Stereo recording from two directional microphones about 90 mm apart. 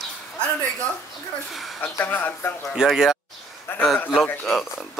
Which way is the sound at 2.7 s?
5° right (ahead or behind).